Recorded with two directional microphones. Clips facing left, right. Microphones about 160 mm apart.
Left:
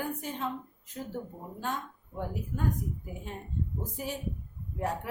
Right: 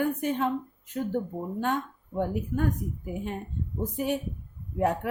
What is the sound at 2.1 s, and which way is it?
A woman's voice, 65° right (ahead or behind).